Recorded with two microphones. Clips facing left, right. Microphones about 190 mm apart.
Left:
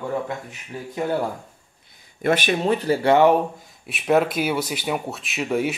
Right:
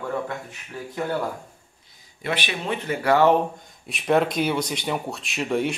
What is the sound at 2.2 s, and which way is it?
Speech, 45° left (ahead or behind).